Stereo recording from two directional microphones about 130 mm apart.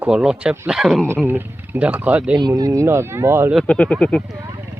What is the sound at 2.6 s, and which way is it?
Speech, 25° right (ahead or behind).